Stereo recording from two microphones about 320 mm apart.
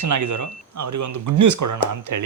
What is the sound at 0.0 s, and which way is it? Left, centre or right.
A man's voice, right.